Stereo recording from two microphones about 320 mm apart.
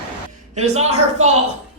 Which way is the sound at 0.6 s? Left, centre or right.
Centre.